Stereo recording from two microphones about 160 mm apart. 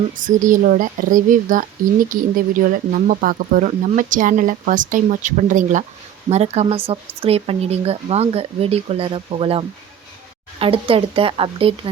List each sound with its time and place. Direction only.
0.2 s speech: 55° right (ahead or behind); by 11.7 s 35° right (ahead or behind)